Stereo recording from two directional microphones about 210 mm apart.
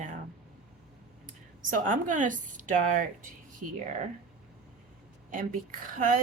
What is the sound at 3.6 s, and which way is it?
Speech, 90° right.